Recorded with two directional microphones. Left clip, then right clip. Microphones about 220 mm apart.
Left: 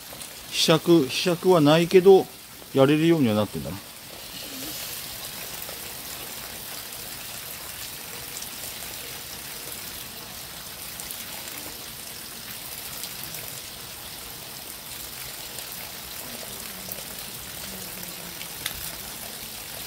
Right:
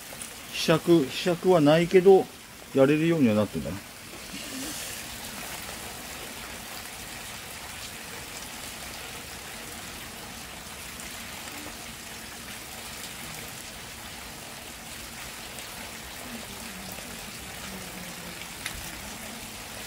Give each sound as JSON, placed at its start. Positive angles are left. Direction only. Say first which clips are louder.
{"t": 0.6, "sound": "speech", "louder": "left 3 dB", "side_deg": 30}